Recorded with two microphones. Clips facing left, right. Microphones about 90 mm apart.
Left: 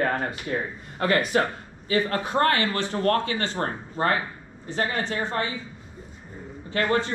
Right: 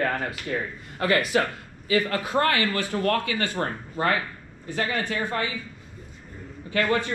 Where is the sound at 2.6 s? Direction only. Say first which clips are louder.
Left 1 dB; 25° left (ahead or behind).